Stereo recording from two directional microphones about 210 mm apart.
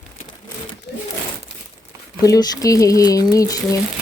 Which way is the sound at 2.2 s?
15° left (ahead or behind).